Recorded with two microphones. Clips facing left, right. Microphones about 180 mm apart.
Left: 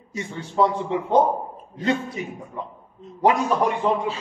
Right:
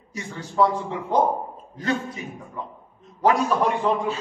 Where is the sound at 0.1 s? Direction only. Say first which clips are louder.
Left 2 dB; 20° left (ahead or behind).